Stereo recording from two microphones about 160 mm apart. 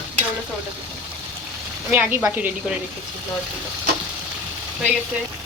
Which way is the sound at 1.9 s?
10° right (ahead or behind).